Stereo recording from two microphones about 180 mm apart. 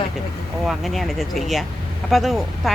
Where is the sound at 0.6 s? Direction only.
Centre (ahead or behind).